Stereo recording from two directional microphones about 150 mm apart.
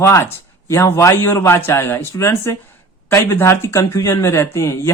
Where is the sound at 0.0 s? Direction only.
20° left (ahead or behind).